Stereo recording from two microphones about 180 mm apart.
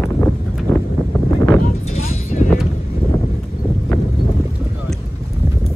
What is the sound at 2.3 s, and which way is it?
Vehicle, 45° left (ahead or behind).